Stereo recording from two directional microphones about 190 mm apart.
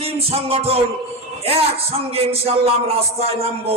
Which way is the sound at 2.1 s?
30° right (ahead or behind).